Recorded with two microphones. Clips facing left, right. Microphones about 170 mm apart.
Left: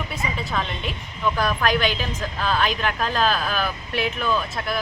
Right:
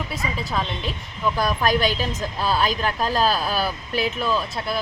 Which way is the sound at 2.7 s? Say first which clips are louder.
Right 1 dB; 35° right (ahead or behind).